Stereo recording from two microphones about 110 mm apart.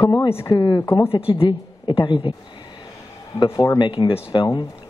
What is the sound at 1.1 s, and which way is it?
A woman's voice, 55° left (ahead or behind).